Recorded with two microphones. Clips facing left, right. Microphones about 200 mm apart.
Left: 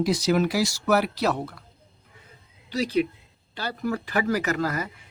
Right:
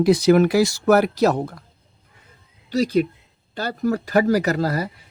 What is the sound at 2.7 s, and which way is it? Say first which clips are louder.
Speech: right 5 dB; 45° right (ahead or behind).